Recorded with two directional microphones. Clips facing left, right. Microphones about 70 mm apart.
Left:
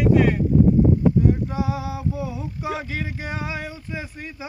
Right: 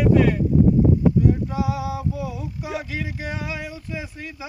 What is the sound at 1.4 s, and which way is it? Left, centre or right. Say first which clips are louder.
Male singing: right 1 dB; left.